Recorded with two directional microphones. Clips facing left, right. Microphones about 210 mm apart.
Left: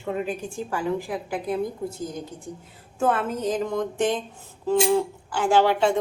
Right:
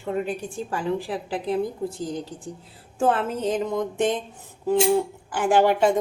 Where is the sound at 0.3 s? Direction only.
35° right (ahead or behind).